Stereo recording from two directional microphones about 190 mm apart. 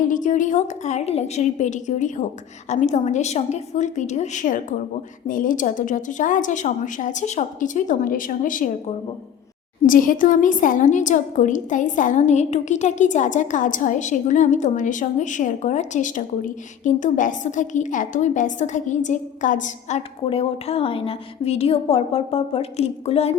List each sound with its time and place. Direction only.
0.0 s a woman's voice: 45° left (ahead or behind)
9.8 s a woman's voice: 45° left (ahead or behind)